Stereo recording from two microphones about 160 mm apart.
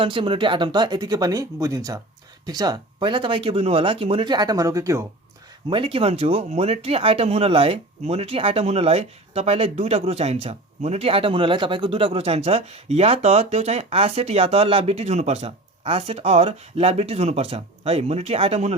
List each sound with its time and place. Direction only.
0.0 s speech: 30° right (ahead or behind)
5.6 s speech: 35° right (ahead or behind)